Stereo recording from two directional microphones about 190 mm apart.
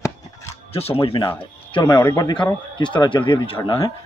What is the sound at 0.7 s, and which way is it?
Speech, 30° left (ahead or behind).